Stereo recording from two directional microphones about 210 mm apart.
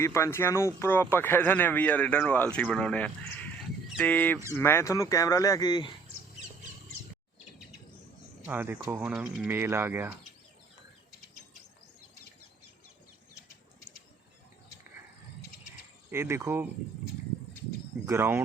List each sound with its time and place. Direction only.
0.0 s speech: 15° left (ahead or behind)
8.4 s speech: 10° right (ahead or behind)
16.1 s speech: 15° right (ahead or behind)
18.0 s speech: 15° right (ahead or behind)